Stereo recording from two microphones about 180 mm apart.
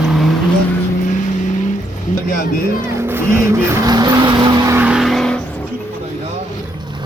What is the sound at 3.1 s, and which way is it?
Vehicle, 15° right (ahead or behind).